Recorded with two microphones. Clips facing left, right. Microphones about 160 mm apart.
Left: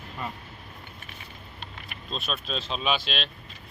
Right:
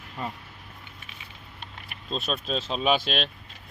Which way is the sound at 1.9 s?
40° right (ahead or behind).